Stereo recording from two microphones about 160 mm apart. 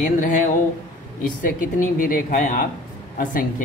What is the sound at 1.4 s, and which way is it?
A woman's voice, 55° left (ahead or behind).